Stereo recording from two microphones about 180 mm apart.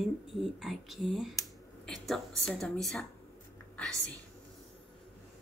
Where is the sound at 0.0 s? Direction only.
Centre (ahead or behind).